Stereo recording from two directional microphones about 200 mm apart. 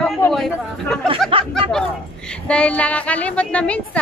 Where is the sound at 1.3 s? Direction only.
25° right (ahead or behind).